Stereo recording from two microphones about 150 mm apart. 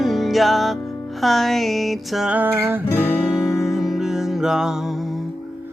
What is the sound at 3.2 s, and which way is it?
Music, 5° right (ahead or behind).